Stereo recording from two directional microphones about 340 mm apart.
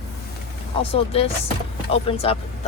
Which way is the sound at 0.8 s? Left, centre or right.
Centre.